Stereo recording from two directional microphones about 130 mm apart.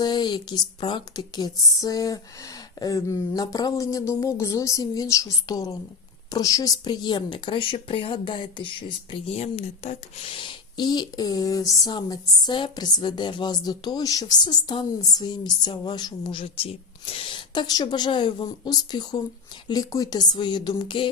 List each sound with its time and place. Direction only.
0.0 s a woman's voice: 35° left (ahead or behind)